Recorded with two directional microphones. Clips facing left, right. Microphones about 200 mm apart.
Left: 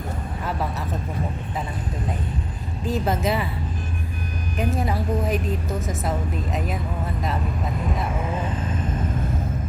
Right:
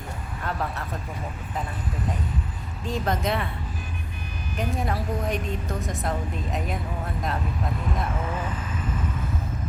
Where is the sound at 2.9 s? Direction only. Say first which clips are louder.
Left 3 dB; 5° left (ahead or behind).